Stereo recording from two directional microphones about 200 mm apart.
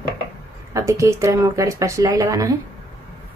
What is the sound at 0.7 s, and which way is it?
Speech, 15° right (ahead or behind).